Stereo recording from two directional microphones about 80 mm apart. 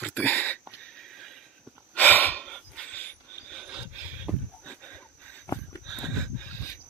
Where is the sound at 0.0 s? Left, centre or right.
Left.